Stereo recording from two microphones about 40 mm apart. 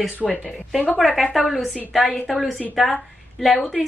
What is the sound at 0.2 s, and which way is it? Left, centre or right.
A woman's voice, centre.